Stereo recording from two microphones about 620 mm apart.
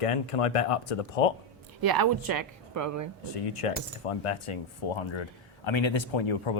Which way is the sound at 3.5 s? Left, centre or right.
Left.